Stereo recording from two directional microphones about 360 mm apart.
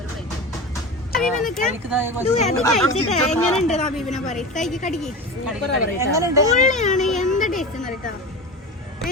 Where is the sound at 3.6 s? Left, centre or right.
Centre.